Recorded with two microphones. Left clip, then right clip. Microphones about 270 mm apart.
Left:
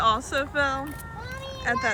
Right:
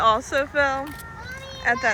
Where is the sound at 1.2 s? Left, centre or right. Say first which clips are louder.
Right 5 dB; left.